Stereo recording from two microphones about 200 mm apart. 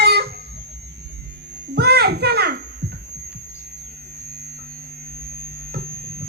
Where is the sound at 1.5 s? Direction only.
55° right (ahead or behind).